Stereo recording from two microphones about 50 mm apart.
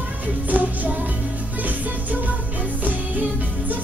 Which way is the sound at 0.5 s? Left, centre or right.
Right.